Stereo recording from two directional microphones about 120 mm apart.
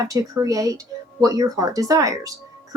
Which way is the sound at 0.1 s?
30° right (ahead or behind).